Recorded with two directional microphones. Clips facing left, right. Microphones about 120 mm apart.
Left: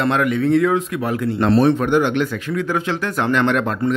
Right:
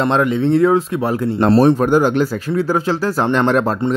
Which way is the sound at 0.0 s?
30° right (ahead or behind).